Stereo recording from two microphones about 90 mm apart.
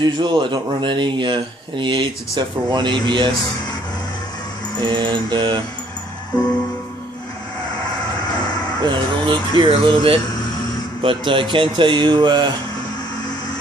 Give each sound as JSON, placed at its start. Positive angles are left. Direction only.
{"t": 0.0, "sound": "speech", "side_deg": -55}
{"t": 4.8, "sound": "speech", "side_deg": -60}
{"t": 8.8, "sound": "speech", "side_deg": -60}